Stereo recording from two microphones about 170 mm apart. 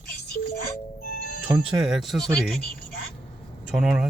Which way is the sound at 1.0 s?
60° left (ahead or behind).